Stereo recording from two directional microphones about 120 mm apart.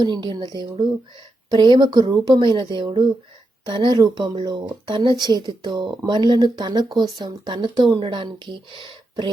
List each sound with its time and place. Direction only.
0.0 s speech: 40° right (ahead or behind)